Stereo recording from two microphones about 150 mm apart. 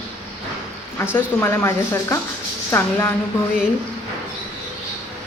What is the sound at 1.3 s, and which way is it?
Speech, 15° left (ahead or behind).